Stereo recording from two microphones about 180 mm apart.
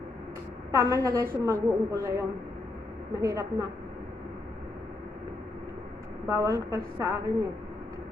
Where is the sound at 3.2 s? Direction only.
15° right (ahead or behind).